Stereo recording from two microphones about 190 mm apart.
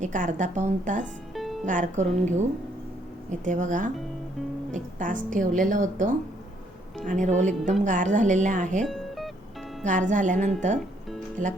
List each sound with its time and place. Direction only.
0.0 s speech: 40° right (ahead or behind)
1.3 s music: centre (ahead or behind)
1.6 s speech: 40° right (ahead or behind)
3.4 s speech: 40° right (ahead or behind)
8.8 s music: centre (ahead or behind)
9.8 s speech: 40° right (ahead or behind)